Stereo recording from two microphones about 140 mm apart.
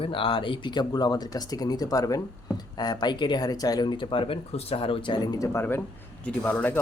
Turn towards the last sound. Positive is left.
turn(degrees=10)  # may be behind; listen again after turning